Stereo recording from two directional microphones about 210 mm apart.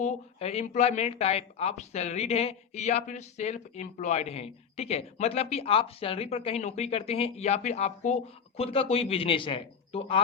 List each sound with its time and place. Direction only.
0.0 s speech: 30° left (ahead or behind)